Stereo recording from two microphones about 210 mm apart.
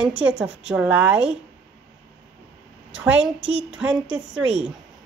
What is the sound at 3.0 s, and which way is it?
A woman's voice, 5° right (ahead or behind).